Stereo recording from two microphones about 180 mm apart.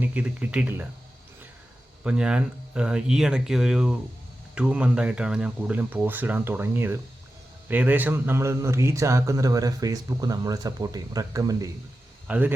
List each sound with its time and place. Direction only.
0.0 s speech: 10° right (ahead or behind)
2.0 s speech: 5° right (ahead or behind)